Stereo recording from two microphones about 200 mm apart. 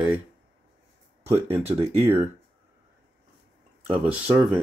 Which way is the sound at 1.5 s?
10° right (ahead or behind).